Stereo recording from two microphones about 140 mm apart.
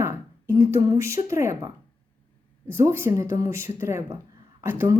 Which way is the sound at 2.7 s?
15° right (ahead or behind).